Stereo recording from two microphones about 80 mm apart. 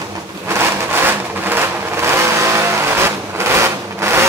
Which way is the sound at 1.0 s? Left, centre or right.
Right.